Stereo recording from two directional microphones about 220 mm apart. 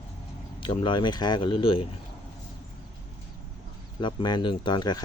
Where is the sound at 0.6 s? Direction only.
20° left (ahead or behind).